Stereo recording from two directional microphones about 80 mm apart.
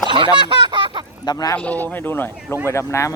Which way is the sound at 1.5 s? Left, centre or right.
Centre.